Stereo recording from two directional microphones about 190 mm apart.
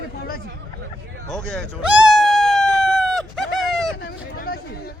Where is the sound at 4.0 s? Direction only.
55° left (ahead or behind).